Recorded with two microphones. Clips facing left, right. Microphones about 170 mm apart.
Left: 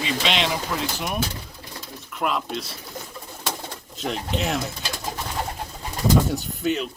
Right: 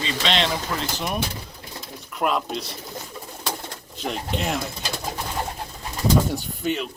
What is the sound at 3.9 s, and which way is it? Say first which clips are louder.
Speech: left 1 dB; centre (ahead or behind).